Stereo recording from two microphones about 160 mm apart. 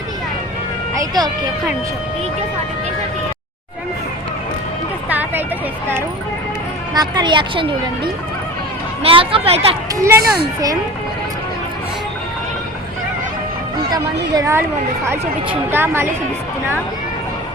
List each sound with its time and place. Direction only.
0.9 s speech: 25° right (ahead or behind)
5.0 s a sound: 10° right (ahead or behind)
6.9 s a woman's voice: 25° right (ahead or behind)
9.0 s speech: 35° right (ahead or behind)
9.9 s a woman's voice: 20° right (ahead or behind)
10.2 s speech: 80° right
14.3 s a woman's voice: 20° right (ahead or behind)
15.7 s a woman's voice: 15° right (ahead or behind)